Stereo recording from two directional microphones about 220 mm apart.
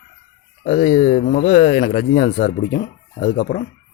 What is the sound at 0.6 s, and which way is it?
Speech, 35° left (ahead or behind).